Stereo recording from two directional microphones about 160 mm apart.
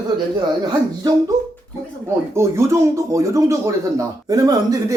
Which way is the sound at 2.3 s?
15° right (ahead or behind).